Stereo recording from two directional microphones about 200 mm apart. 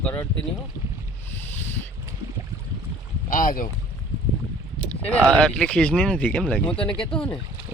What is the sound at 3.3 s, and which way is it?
Speech, 40° left (ahead or behind).